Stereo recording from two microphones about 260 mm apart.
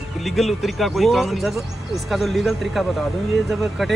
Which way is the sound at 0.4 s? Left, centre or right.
Centre.